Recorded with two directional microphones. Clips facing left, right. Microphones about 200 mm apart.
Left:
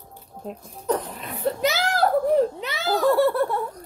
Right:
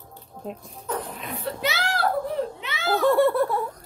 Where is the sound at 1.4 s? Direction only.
40° left (ahead or behind).